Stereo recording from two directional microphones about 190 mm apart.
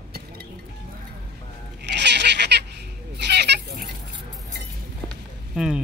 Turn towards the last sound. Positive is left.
turn(degrees=-5)  # may be behind; listen again after turning